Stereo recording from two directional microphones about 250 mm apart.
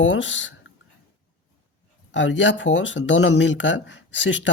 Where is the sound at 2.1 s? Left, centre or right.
Left.